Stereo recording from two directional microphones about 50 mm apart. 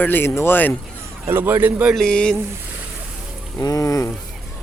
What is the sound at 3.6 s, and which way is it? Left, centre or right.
Speech, left.